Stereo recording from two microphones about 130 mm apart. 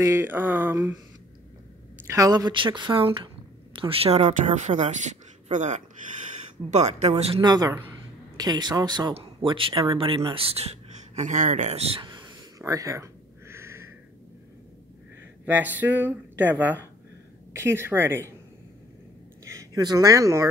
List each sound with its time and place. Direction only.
0.0 s speech: 20° right (ahead or behind)
2.0 s a woman's voice: 25° right (ahead or behind); by 7.4 s 50° right (ahead or behind)
7.4 s a woman's voice: 30° right (ahead or behind)
9.1 s speech: 45° right (ahead or behind)
11.1 s speech: 70° right (ahead or behind)
12.0 s a sound: 35° right (ahead or behind); by 13.8 s 20° right (ahead or behind)
15.4 s speech: 15° right (ahead or behind)
19.4 s speech: 25° right (ahead or behind)